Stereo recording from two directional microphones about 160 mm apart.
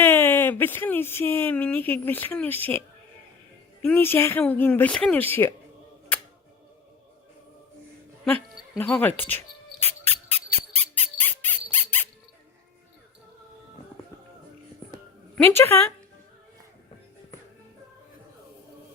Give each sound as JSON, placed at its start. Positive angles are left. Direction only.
{"t": 0.0, "sound": "speech", "side_deg": 15}
{"t": 3.8, "sound": "speech", "side_deg": 15}
{"t": 8.2, "sound": "a sound", "side_deg": 5}
{"t": 8.8, "sound": "speech", "side_deg": 10}
{"t": 10.1, "sound": "music", "side_deg": -40}
{"t": 11.2, "sound": "a sound", "side_deg": 10}
{"t": 15.5, "sound": "speech", "side_deg": 15}